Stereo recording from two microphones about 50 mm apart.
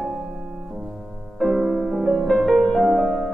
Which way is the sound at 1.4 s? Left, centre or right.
Centre.